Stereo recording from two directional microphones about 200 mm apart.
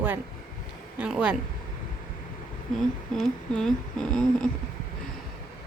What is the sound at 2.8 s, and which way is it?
Humming, centre (ahead or behind).